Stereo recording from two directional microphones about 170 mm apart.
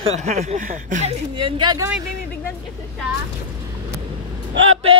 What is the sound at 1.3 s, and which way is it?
Speech, 30° right (ahead or behind).